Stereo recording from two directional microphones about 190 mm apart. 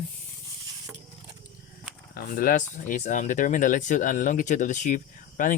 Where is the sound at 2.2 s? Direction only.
50° left (ahead or behind).